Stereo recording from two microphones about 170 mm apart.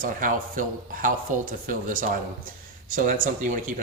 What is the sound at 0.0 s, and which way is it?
Speech, 50° right (ahead or behind).